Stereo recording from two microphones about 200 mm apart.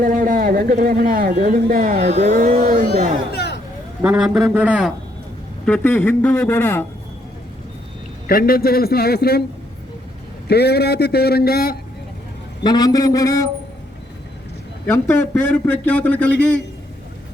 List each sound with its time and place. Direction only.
0.0 s speech: 45° right (ahead or behind)
2.0 s speech: 35° right (ahead or behind)
3.3 s vehicle: 55° left (ahead or behind)
4.0 s a man's voice: 5° right (ahead or behind)
5.6 s a man's voice: 5° left (ahead or behind)
8.3 s a man's voice: 45° left (ahead or behind)
10.5 s a man's voice: 55° left (ahead or behind)
12.6 s a man's voice: 20° left (ahead or behind)
14.8 s a man's voice: 15° left (ahead or behind)